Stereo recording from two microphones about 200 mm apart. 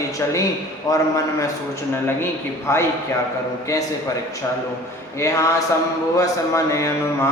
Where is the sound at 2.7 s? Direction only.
15° left (ahead or behind).